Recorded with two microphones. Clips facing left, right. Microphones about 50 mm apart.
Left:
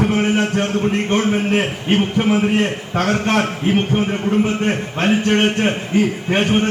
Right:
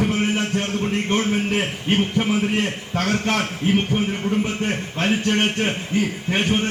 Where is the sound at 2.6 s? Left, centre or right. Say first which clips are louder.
Left 4 dB; centre.